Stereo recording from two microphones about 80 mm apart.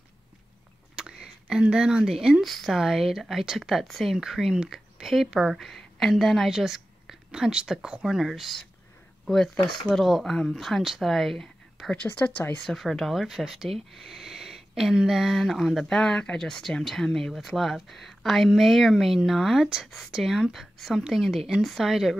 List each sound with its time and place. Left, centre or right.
0.9 s speech: centre
11.9 s a woman's voice: centre
12.6 s speech: centre